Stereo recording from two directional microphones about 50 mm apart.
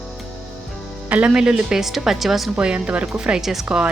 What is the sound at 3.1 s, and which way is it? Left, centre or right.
Speech, centre.